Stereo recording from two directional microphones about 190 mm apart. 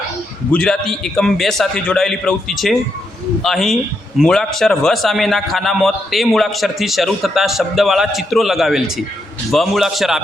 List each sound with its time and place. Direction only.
0.5 s a man's voice: 5° left (ahead or behind)